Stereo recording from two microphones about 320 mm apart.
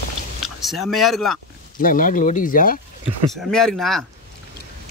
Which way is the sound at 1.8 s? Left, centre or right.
Left.